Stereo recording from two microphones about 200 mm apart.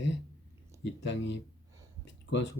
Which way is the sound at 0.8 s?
65° left (ahead or behind).